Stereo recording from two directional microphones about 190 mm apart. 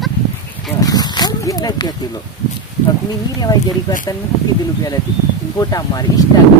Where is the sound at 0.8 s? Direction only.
20° left (ahead or behind).